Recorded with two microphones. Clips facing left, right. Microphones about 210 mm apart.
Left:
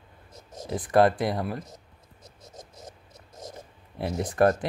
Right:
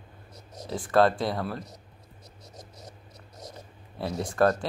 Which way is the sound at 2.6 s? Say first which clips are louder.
Left 2 dB; 50° left (ahead or behind).